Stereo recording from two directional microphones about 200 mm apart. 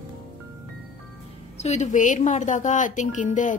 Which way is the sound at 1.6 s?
35° left (ahead or behind).